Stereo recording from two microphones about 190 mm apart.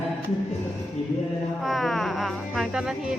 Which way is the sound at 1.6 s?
Centre (ahead or behind).